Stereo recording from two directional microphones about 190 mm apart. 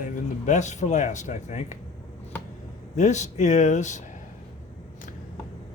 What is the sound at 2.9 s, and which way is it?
Speech, 40° left (ahead or behind).